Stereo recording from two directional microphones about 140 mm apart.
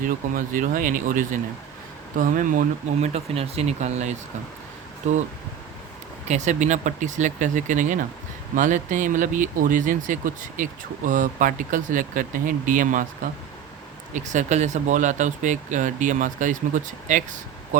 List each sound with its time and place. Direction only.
0.0 s speech: 75° right (ahead or behind)
6.2 s speech: 55° right (ahead or behind)
14.1 s speech: 60° right (ahead or behind)